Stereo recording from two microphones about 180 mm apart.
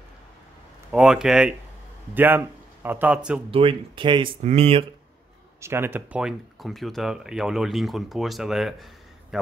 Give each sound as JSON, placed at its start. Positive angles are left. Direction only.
{"t": 0.9, "sound": "a man's voice", "side_deg": -5}
{"t": 3.4, "sound": "speech", "side_deg": -30}
{"t": 5.6, "sound": "speech", "side_deg": -15}